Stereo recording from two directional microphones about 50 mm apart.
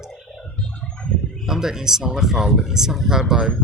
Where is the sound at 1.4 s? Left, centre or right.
Centre.